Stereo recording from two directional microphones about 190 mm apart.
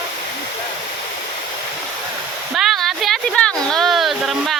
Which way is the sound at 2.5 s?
Centre (ahead or behind).